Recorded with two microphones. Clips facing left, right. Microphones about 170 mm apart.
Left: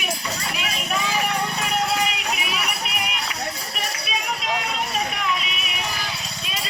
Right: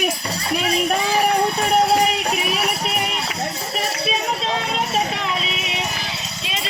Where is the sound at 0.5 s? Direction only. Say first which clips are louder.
Right 11 dB; 40° right (ahead or behind).